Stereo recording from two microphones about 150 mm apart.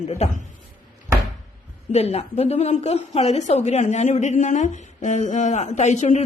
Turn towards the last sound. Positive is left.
turn(degrees=50)  # may be behind; listen again after turning